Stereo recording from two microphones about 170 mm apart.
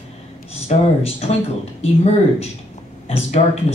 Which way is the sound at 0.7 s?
35° left (ahead or behind).